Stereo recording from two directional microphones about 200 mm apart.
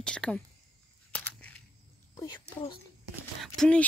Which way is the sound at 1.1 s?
5° left (ahead or behind).